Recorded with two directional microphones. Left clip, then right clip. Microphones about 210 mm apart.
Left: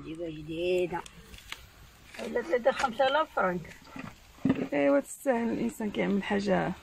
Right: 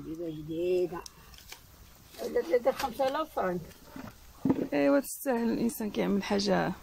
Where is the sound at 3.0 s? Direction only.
20° right (ahead or behind).